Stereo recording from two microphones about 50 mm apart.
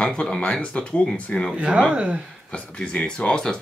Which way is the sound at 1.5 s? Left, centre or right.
Right.